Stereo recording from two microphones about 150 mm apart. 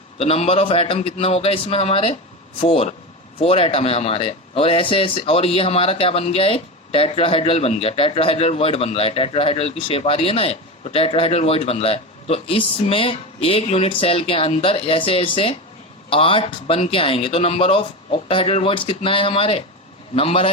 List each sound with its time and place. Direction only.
0.2 s speech: 40° left (ahead or behind)